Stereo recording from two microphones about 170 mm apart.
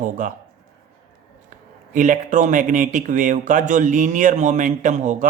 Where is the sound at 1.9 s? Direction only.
50° right (ahead or behind).